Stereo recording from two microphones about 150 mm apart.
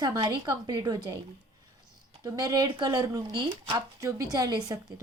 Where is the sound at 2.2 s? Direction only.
25° right (ahead or behind).